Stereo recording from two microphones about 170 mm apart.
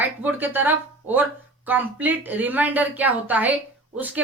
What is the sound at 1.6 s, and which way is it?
A woman's voice, 10° right (ahead or behind).